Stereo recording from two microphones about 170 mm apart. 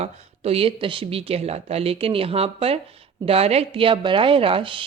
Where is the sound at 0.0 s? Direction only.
35° right (ahead or behind).